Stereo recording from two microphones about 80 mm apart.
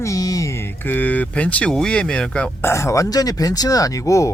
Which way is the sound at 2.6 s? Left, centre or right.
Left.